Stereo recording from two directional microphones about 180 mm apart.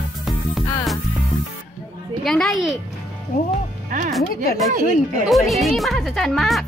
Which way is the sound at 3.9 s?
50° right (ahead or behind).